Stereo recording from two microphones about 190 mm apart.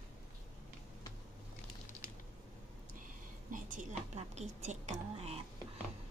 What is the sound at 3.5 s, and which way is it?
A woman's voice, 45° right (ahead or behind).